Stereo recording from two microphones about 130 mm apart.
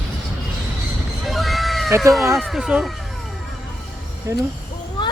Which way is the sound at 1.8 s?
20° right (ahead or behind).